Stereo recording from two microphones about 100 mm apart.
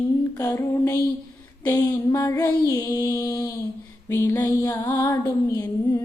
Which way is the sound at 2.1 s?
35° left (ahead or behind).